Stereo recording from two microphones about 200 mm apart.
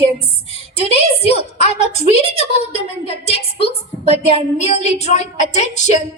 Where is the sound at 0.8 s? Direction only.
30° left (ahead or behind).